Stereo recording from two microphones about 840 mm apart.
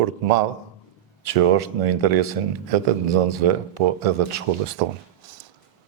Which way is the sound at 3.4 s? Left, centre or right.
Right.